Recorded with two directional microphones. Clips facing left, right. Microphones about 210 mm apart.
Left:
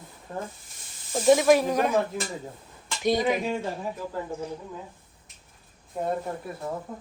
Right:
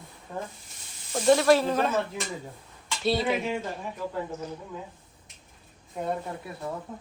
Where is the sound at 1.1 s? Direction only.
10° left (ahead or behind).